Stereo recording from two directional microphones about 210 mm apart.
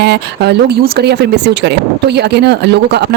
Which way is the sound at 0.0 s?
55° right (ahead or behind).